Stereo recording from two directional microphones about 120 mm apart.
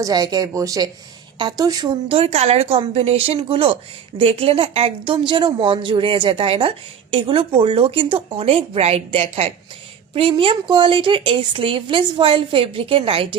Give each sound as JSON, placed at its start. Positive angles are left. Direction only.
{"t": 0.0, "sound": "a woman's voice", "side_deg": -30}
{"t": 2.0, "sound": "a woman's voice", "side_deg": -55}